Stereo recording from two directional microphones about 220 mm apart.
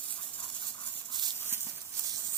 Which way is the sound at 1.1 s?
20° right (ahead or behind).